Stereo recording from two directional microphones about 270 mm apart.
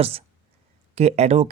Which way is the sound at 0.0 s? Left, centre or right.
Right.